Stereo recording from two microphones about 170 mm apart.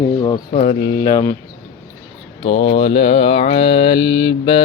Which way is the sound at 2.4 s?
35° left (ahead or behind).